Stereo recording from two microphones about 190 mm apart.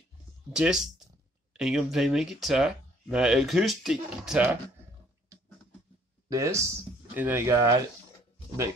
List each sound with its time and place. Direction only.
0.5 s speech: 5° right (ahead or behind)
6.2 s speech: 15° right (ahead or behind)